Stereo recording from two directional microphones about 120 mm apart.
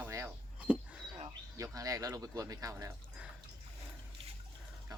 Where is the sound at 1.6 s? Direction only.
30° right (ahead or behind).